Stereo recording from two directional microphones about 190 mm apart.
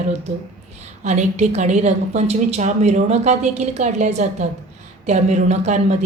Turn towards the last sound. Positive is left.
turn(degrees=-40)  # may be behind; listen again after turning